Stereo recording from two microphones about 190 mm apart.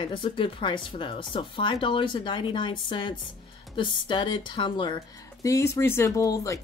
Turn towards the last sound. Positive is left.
turn(degrees=15)  # may be behind; listen again after turning